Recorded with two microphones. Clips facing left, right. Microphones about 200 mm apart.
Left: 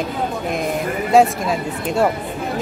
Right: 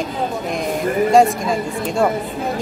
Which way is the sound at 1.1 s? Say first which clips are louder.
Left 2 dB; centre (ahead or behind).